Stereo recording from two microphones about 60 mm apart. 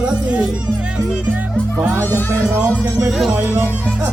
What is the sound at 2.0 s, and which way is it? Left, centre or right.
Speech, left.